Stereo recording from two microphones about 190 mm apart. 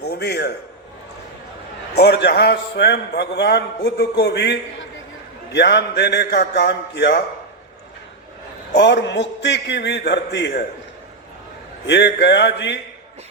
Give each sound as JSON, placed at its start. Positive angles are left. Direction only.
{"t": 0.0, "sound": "a man's voice", "side_deg": 60}
{"t": 2.0, "sound": "a man's voice", "side_deg": 60}
{"t": 5.5, "sound": "a man's voice", "side_deg": 60}
{"t": 8.7, "sound": "a man's voice", "side_deg": 65}
{"t": 11.9, "sound": "a sound", "side_deg": 65}